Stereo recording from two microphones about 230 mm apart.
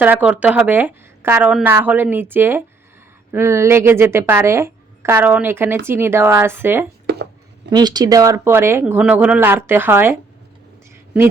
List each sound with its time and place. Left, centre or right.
0.0 s a woman's voice: centre
7.1 s a sound: right
7.7 s a woman's voice: centre